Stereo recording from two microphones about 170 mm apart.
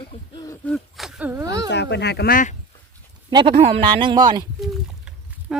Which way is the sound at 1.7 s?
90° left.